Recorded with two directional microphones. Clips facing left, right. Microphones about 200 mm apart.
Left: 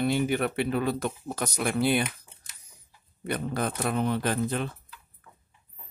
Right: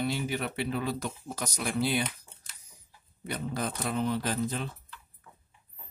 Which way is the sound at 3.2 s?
60° left (ahead or behind).